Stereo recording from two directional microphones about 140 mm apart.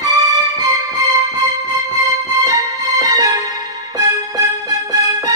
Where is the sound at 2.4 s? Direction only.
25° right (ahead or behind).